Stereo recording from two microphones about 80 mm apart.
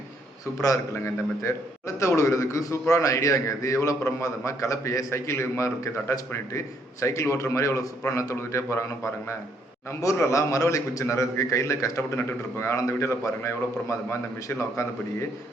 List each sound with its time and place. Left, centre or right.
0.6 s a man's voice: left
10.0 s a man's voice: left